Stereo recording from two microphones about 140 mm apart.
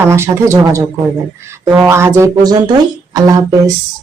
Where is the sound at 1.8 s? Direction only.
20° right (ahead or behind).